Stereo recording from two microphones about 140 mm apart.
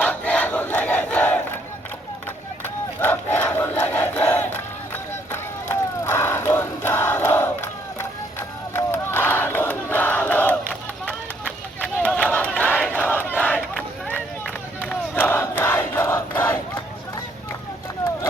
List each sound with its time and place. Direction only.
0.0 s crowd: 10° left (ahead or behind)
3.0 s battle cry: 15° left (ahead or behind)
12.3 s crowd: 10° left (ahead or behind)
12.9 s battle cry: 15° left (ahead or behind)
14.8 s crowd: 15° left (ahead or behind)